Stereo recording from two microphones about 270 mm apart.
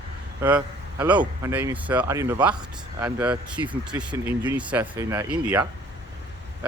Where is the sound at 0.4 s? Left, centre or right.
Centre.